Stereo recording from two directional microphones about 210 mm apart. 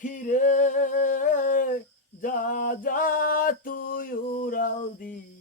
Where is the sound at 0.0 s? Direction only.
40° left (ahead or behind).